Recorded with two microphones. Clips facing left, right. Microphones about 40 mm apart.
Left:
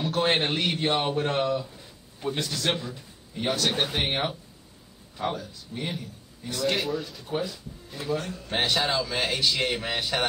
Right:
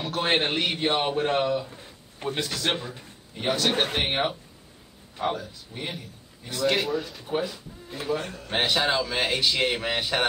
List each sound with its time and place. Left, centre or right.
0.0 s speech: centre
1.7 s a sound: right
2.3 s speech: centre
2.8 s speech: right
3.3 s a man's voice: centre
7.2 s speech: centre
8.5 s speech: centre